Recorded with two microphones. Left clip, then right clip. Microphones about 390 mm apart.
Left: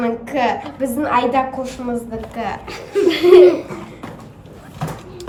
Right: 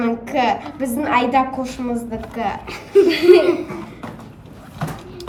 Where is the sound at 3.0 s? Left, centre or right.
Centre.